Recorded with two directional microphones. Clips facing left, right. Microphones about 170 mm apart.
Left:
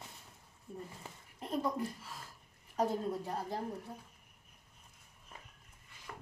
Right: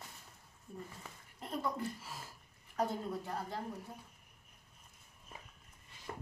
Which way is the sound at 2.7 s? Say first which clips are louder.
Left 3 dB; 30° left (ahead or behind).